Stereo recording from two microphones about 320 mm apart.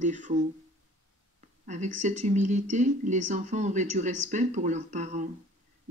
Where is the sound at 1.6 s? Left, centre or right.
Right.